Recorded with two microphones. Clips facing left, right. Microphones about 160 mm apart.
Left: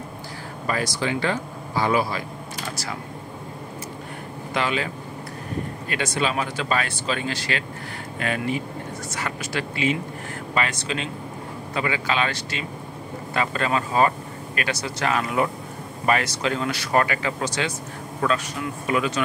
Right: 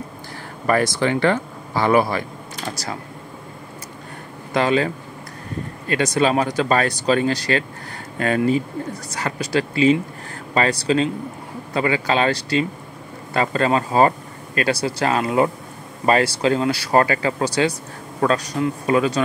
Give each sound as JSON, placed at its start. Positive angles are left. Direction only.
{"t": 0.7, "sound": "speech", "side_deg": -55}
{"t": 4.6, "sound": "speech", "side_deg": -40}
{"t": 5.9, "sound": "speech", "side_deg": -40}
{"t": 9.1, "sound": "speech", "side_deg": -35}